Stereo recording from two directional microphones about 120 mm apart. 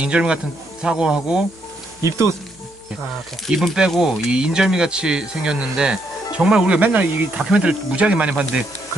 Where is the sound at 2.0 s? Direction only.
25° right (ahead or behind).